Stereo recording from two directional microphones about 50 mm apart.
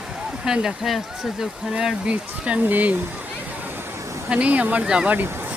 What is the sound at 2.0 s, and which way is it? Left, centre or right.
Speech, right.